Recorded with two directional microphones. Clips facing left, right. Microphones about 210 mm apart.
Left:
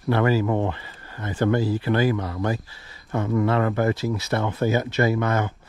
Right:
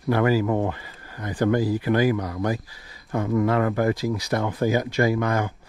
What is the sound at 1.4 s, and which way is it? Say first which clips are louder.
Speech: right 1 dB; 15° right (ahead or behind).